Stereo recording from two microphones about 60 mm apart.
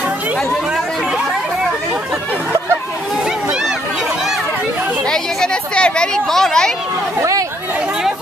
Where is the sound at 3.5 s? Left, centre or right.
Centre.